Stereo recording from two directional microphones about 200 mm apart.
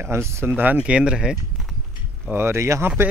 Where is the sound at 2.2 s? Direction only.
10° right (ahead or behind).